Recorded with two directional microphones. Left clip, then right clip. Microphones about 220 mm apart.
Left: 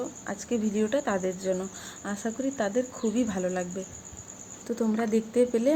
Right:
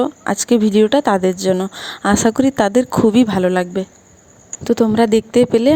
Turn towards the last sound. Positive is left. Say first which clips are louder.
# right 11 dB
turn(degrees=-40)  # may be behind; listen again after turning